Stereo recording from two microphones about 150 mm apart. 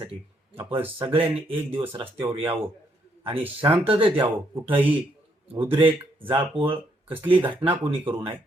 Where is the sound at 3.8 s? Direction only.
40° right (ahead or behind).